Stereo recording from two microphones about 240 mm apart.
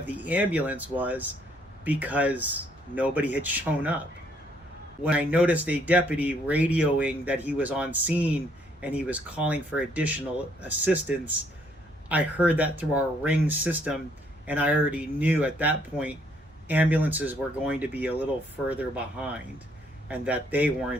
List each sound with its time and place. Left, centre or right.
0.0 s speech: centre
5.0 s speech: centre